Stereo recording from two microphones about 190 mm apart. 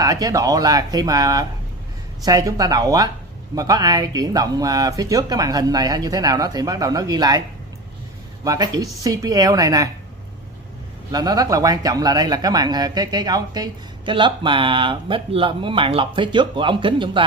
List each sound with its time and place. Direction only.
0.0 s speech: 20° right (ahead or behind)
8.5 s speech: 20° right (ahead or behind)
11.1 s speech: 20° right (ahead or behind)